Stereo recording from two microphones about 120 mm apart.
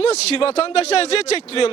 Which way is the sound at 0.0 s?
55° left (ahead or behind).